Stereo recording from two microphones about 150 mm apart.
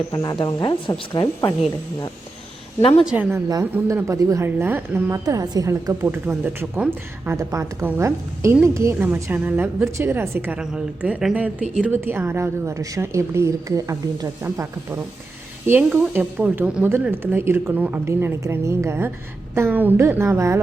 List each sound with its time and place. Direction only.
0.1 s speech: 25° left (ahead or behind)
3.0 s a woman's voice: 10° right (ahead or behind)